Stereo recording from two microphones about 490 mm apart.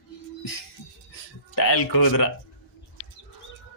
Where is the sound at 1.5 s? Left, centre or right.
Left.